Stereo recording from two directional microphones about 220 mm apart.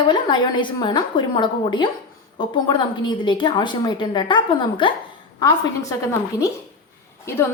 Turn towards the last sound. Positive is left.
turn(degrees=10)  # may be behind; listen again after turning